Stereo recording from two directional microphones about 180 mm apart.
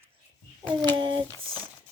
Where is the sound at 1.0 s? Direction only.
25° right (ahead or behind).